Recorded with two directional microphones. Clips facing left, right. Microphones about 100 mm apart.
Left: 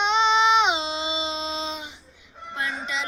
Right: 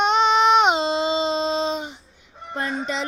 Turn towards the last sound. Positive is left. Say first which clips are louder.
# right 4 dB
turn(degrees=-40)  # may be behind; listen again after turning